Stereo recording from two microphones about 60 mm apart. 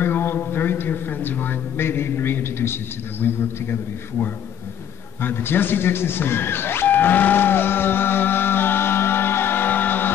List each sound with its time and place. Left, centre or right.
0.0 s a man's voice: left
5.2 s speech: left